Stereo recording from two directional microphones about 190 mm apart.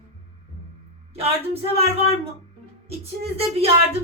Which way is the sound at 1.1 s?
30° right (ahead or behind).